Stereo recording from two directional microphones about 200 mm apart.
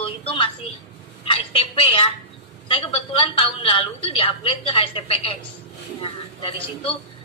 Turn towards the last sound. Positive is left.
turn(degrees=25)  # may be behind; listen again after turning